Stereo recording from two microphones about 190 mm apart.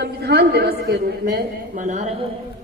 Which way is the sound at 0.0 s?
60° right (ahead or behind).